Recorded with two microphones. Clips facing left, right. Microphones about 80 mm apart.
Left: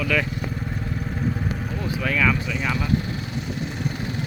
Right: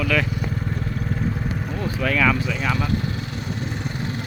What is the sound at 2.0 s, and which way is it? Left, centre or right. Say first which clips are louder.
Speech: right 2 dB; centre.